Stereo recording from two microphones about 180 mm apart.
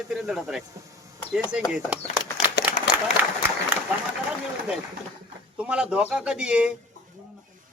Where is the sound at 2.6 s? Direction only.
70° left (ahead or behind).